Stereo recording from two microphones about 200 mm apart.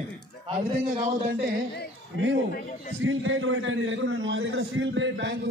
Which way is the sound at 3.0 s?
75° right (ahead or behind).